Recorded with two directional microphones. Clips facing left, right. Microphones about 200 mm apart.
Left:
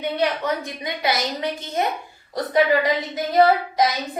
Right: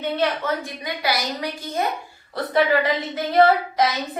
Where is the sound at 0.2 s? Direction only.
20° left (ahead or behind).